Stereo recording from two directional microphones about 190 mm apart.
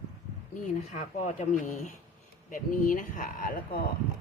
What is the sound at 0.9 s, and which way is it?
Speech, 40° left (ahead or behind).